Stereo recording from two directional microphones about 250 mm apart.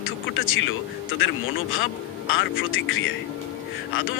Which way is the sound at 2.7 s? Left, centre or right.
Left.